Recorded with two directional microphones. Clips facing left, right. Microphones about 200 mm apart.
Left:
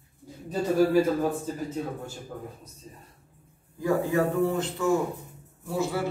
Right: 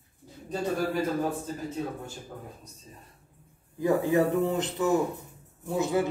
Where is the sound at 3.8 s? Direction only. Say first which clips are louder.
Right 1 dB; 20° right (ahead or behind).